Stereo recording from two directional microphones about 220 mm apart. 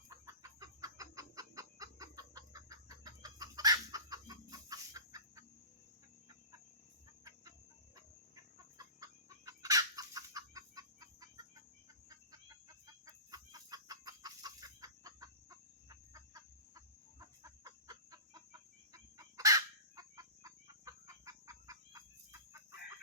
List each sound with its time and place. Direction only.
0.1 s chicken: 15° right (ahead or behind)
9.5 s chicken: 15° right (ahead or behind)